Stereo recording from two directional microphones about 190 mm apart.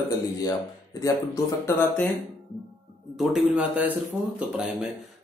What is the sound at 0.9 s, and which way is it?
Speech, 15° left (ahead or behind).